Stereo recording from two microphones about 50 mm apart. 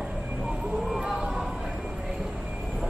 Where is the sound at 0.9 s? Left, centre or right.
Centre.